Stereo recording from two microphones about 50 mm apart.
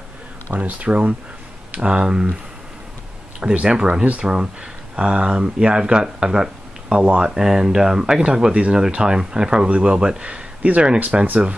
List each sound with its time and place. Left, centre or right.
0.6 s speech: right
3.3 s speech: centre
4.0 s speech: right
4.9 s speech: centre